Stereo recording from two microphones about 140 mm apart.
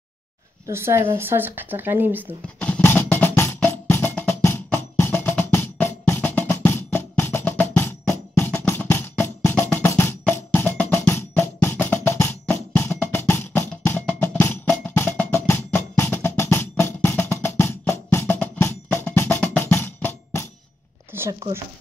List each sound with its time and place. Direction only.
0.7 s speech: 15° right (ahead or behind)
2.6 s music: 10° left (ahead or behind)
21.1 s a sound: 15° right (ahead or behind)